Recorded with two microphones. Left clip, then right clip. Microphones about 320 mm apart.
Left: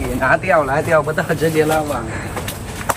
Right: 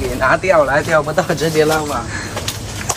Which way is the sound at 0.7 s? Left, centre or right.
Centre.